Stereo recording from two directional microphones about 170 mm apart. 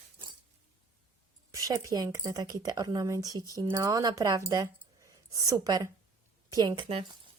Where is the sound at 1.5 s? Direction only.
20° right (ahead or behind).